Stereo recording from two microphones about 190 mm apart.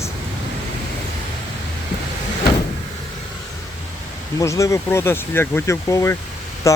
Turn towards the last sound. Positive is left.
turn(degrees=15)  # may be behind; listen again after turning